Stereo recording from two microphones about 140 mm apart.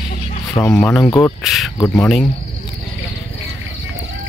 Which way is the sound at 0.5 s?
25° left (ahead or behind).